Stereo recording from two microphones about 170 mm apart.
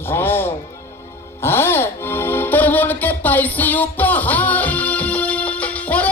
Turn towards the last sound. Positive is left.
turn(degrees=10)  # may be behind; listen again after turning